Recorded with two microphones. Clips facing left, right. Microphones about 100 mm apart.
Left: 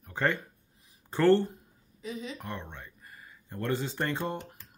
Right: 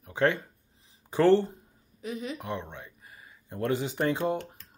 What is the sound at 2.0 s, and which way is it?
Speech, 55° right (ahead or behind).